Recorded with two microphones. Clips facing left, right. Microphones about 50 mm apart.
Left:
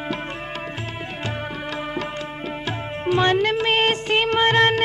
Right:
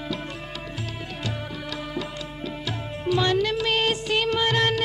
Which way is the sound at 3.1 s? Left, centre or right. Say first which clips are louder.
Left 4 dB; left.